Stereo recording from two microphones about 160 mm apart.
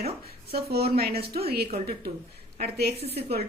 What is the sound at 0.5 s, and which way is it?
Speech, 80° right.